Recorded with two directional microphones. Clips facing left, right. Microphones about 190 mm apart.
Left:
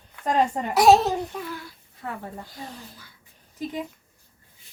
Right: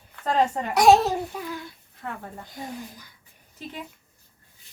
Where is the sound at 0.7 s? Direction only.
Centre (ahead or behind).